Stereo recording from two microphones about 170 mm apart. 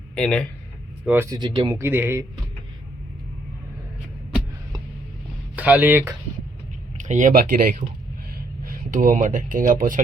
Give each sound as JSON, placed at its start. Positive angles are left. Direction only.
{"t": 0.2, "sound": "speech", "side_deg": 5}
{"t": 1.0, "sound": "speech", "side_deg": -15}
{"t": 1.4, "sound": "speech", "side_deg": -25}
{"t": 1.7, "sound": "speech", "side_deg": -10}
{"t": 5.5, "sound": "speech", "side_deg": -10}
{"t": 7.0, "sound": "speech", "side_deg": -45}